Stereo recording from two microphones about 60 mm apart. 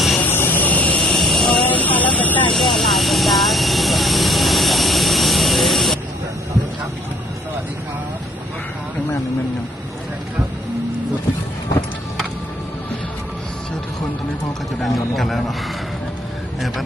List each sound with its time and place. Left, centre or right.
0.2 s vehicle: left
1.1 s vehicle: centre
1.6 s vehicle: left
2.5 s vehicle: centre
14.8 s a sound: centre
16.6 s a sound: centre